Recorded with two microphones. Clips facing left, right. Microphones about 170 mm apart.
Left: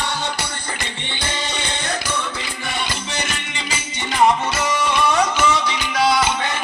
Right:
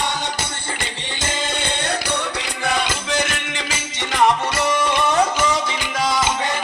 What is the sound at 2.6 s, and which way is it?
Music, 90° right.